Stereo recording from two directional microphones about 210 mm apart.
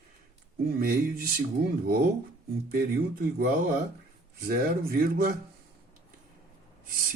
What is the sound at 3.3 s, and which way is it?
A man's voice, 40° right (ahead or behind).